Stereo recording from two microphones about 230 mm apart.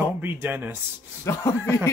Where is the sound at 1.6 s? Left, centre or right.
Centre.